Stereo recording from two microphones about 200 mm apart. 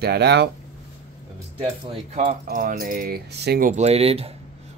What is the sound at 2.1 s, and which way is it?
Speech, 40° right (ahead or behind).